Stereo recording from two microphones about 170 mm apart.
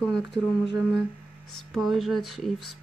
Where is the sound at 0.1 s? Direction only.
80° left.